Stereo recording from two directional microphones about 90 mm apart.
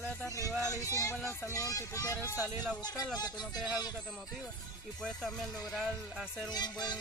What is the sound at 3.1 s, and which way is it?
Music, 50° left (ahead or behind).